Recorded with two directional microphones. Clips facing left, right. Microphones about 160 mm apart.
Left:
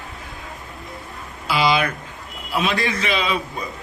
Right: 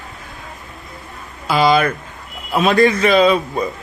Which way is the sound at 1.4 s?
50° right (ahead or behind).